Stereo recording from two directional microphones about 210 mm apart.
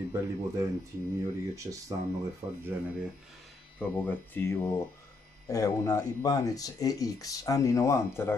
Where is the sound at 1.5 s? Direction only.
15° right (ahead or behind).